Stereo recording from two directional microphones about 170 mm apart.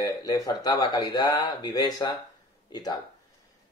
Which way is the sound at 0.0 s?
20° left (ahead or behind).